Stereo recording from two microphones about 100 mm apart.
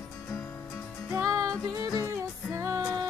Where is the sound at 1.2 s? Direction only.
35° right (ahead or behind).